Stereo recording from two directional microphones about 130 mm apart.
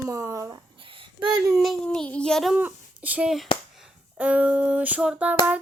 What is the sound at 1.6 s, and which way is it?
Child singing, 5° left (ahead or behind).